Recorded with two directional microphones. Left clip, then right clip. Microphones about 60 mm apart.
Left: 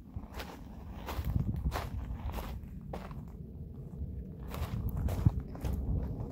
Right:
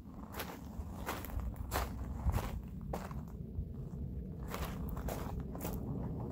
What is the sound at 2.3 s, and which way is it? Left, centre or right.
Walk, centre.